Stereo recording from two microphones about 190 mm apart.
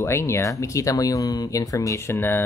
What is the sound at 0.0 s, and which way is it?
Speech, 15° left (ahead or behind).